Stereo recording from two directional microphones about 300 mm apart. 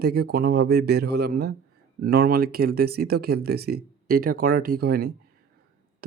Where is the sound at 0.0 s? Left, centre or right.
Right.